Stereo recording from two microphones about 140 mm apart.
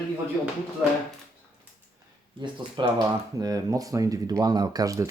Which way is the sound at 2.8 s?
35° right (ahead or behind).